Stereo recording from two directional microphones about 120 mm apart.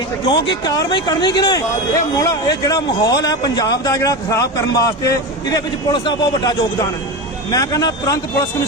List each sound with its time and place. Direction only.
0.3 s speech: 35° left (ahead or behind)